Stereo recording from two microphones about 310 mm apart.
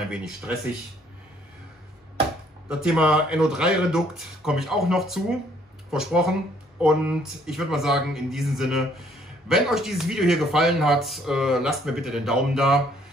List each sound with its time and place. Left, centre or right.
0.1 s speech: centre
2.7 s speech: centre